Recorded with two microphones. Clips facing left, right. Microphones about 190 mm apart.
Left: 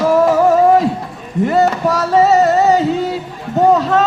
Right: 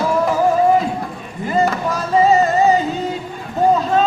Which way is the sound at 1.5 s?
75° left (ahead or behind).